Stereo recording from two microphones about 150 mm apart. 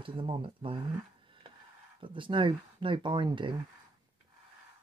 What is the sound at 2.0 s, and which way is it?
Speech, 35° right (ahead or behind).